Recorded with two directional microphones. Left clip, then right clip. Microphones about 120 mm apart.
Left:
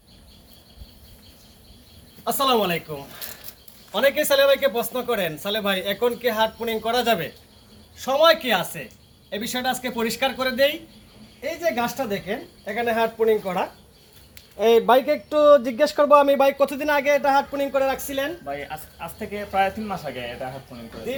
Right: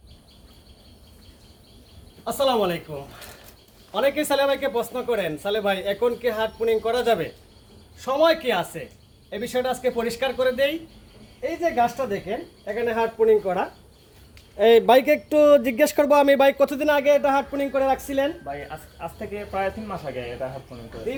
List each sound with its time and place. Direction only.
2.2 s speech: 20° right (ahead or behind)
3.9 s speech: 20° right (ahead or behind)
14.6 s speech: 55° right (ahead or behind)
16.4 s speech: 50° right (ahead or behind); by 18.3 s 30° right (ahead or behind)
18.4 s speech: 20° right (ahead or behind)
19.5 s speech: 5° right (ahead or behind)